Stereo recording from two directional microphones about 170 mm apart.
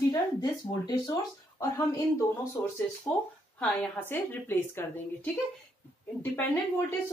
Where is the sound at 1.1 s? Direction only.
20° left (ahead or behind).